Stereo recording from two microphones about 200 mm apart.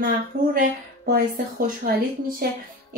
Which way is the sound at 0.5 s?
50° right (ahead or behind).